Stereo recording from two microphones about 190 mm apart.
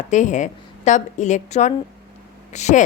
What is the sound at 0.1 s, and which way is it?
A woman's voice, 40° left (ahead or behind).